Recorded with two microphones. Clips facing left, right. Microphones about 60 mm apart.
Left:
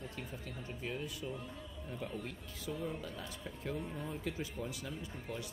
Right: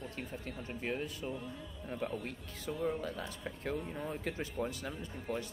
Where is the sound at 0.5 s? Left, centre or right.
Right.